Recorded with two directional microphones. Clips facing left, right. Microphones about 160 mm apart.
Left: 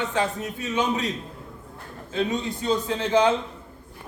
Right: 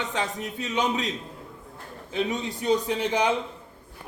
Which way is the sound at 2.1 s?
20° right (ahead or behind).